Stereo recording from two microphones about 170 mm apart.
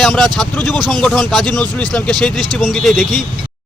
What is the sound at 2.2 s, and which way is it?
Speech, centre (ahead or behind).